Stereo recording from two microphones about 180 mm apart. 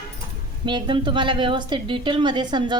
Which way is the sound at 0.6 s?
25° right (ahead or behind).